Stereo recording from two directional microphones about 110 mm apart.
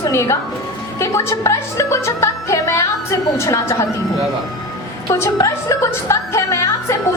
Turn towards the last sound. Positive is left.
turn(degrees=25)  # may be behind; listen again after turning